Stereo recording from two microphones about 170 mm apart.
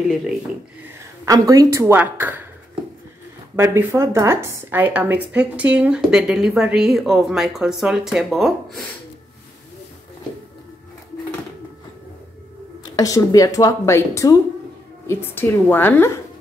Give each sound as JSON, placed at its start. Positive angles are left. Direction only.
{"t": 1.2, "sound": "a woman's voice", "side_deg": -20}
{"t": 3.5, "sound": "speech", "side_deg": -15}
{"t": 12.9, "sound": "a woman's voice", "side_deg": 20}